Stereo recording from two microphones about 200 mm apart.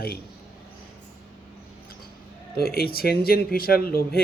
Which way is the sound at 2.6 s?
50° left (ahead or behind).